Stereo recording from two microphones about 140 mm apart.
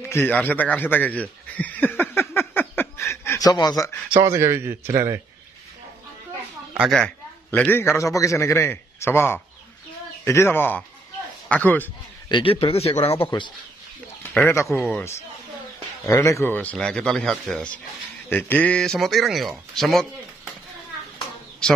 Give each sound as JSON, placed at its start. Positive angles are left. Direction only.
{"t": 0.1, "sound": "a sound", "side_deg": 15}
{"t": 4.2, "sound": "a man's voice", "side_deg": -20}
{"t": 7.5, "sound": "a man's voice", "side_deg": 15}
{"t": 12.3, "sound": "speech", "side_deg": 40}
{"t": 14.4, "sound": "a man's voice", "side_deg": 20}